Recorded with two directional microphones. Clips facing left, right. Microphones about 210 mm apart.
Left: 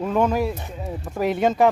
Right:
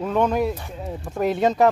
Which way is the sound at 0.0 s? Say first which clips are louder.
Even; 5° left (ahead or behind).